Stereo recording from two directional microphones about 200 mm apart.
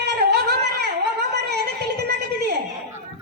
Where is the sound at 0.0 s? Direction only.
55° right (ahead or behind).